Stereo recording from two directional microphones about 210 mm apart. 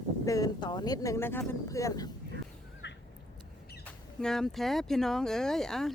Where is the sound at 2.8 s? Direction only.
55° left (ahead or behind).